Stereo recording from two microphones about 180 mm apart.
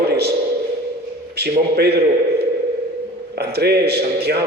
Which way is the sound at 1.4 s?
65° right (ahead or behind).